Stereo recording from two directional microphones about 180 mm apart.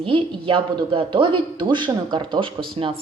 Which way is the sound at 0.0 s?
30° right (ahead or behind).